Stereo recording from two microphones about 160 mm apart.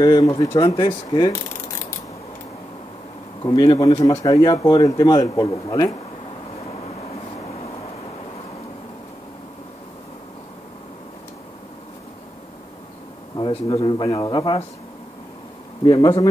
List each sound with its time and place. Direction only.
0.0 s speech: 25° left (ahead or behind)
0.5 s speech: 35° left (ahead or behind)
0.7 s speech: 25° left (ahead or behind)
3.4 s speech: 20° left (ahead or behind)
13.4 s speech: 35° left (ahead or behind)
15.8 s speech: 30° left (ahead or behind)